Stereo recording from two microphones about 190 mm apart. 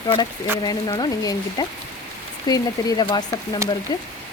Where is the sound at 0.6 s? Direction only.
20° left (ahead or behind).